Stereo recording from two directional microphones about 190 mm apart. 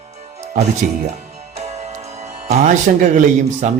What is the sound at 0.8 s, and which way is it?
Speech, 45° right (ahead or behind).